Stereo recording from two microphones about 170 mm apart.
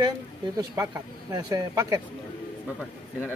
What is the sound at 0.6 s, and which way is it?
Speech, 20° right (ahead or behind).